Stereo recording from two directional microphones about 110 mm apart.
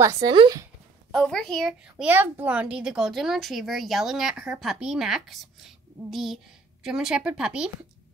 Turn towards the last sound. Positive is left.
turn(degrees=-10)  # may be behind; listen again after turning